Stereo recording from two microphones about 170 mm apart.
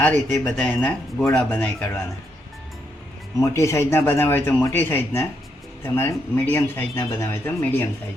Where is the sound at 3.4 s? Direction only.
15° left (ahead or behind).